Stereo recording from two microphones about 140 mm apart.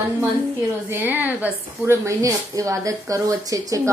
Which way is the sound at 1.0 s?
10° right (ahead or behind).